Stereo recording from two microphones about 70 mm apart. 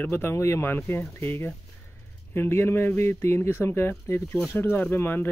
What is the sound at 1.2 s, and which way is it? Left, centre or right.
Speech, left.